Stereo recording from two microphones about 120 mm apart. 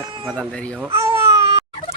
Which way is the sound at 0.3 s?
5° left (ahead or behind).